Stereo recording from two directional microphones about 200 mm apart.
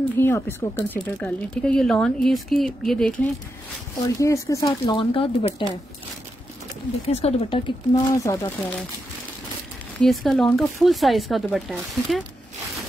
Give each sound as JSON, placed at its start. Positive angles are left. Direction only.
{"t": 0.2, "sound": "speech", "side_deg": 10}
{"t": 4.0, "sound": "speech", "side_deg": 15}
{"t": 7.1, "sound": "speech", "side_deg": 30}
{"t": 7.9, "sound": "speech", "side_deg": 15}
{"t": 9.9, "sound": "speech", "side_deg": 0}